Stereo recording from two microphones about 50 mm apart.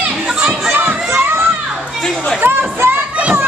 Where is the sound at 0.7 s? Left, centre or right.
Right.